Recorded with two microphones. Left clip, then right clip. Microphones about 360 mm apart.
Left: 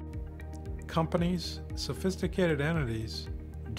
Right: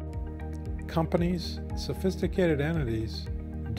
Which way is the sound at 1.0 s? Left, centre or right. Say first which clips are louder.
Right 2 dB; right.